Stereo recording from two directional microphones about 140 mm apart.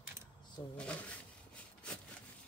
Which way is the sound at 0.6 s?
30° left (ahead or behind).